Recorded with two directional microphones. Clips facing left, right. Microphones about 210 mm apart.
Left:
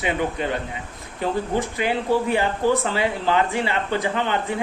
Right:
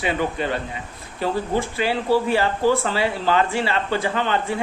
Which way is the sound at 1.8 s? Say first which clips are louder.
Right 2 dB; 20° left (ahead or behind).